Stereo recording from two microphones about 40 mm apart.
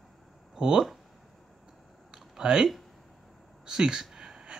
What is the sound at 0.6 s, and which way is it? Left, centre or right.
Speech, right.